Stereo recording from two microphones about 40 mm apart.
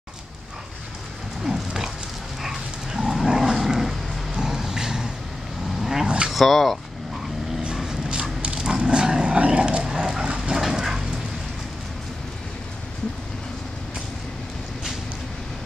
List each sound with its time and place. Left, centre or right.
1.4 s pig: centre
2.4 s dog: centre
4.4 s a sound: centre
5.8 s vehicle: centre
6.0 s a sound: right
6.3 s speech: centre
7.7 s dog: centre
9.2 s a sound: right
9.8 s dog: centre